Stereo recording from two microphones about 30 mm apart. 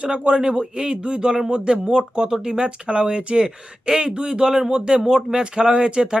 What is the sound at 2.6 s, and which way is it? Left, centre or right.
A man's voice, right.